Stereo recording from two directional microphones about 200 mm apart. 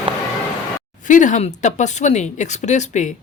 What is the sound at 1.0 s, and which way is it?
A woman's voice, 40° left (ahead or behind).